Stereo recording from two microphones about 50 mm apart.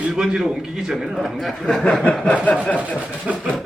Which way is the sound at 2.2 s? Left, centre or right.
Left.